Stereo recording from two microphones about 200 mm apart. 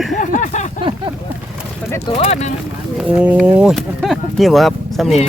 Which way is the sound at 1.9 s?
15° left (ahead or behind).